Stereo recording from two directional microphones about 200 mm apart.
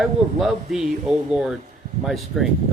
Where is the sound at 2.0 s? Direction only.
Centre (ahead or behind).